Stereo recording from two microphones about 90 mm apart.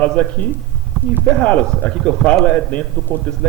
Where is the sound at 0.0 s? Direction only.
15° left (ahead or behind).